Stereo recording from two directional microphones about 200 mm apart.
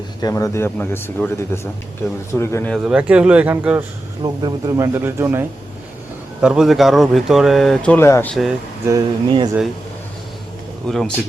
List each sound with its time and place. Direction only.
0.2 s speech: 15° left (ahead or behind)
2.7 s speech: 5° right (ahead or behind)
4.2 s speech: 20° right (ahead or behind); by 8.5 s centre (ahead or behind)
8.9 s speech: 20° right (ahead or behind)
10.8 s speech: centre (ahead or behind)